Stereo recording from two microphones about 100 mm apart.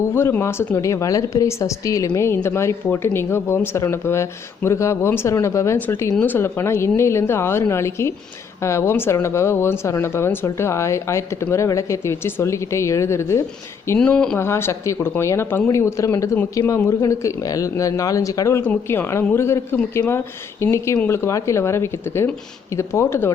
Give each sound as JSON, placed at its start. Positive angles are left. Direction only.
{"t": 0.1, "sound": "speech", "side_deg": 25}
{"t": 14.0, "sound": "speech", "side_deg": 10}
{"t": 14.3, "sound": "speech", "side_deg": 25}